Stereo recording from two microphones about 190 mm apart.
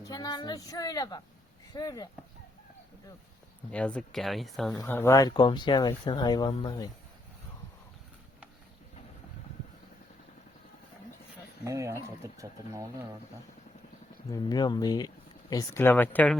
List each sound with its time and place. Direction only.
0.0 s speech: 20° left (ahead or behind)
3.7 s speech: 5° left (ahead or behind)
4.7 s speech: 15° left (ahead or behind)
11.6 s speech: 15° right (ahead or behind)
14.3 s speech: 20° left (ahead or behind)